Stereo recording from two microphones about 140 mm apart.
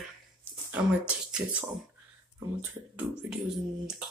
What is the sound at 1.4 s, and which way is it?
Speech, 15° right (ahead or behind).